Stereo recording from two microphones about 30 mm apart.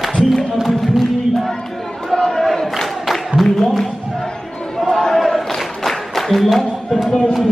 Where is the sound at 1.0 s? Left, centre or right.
Centre.